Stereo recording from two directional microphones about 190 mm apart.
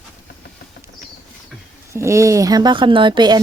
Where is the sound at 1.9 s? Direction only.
15° right (ahead or behind).